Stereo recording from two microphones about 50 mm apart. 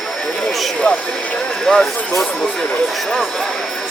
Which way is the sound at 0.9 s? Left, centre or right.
Left.